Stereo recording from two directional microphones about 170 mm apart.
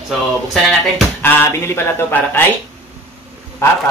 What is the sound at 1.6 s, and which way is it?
Speech, 15° left (ahead or behind).